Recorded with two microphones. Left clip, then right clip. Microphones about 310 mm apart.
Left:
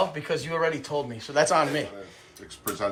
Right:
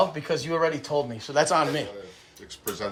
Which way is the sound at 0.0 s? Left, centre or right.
Centre.